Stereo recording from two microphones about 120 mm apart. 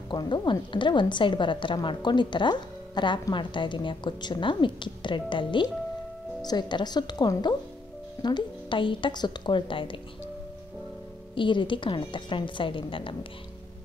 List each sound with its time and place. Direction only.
0.1 s a woman's voice: 40° left (ahead or behind)
11.3 s a woman's voice: 45° left (ahead or behind)